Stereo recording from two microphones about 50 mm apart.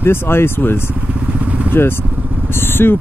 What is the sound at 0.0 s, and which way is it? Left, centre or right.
Speech, left.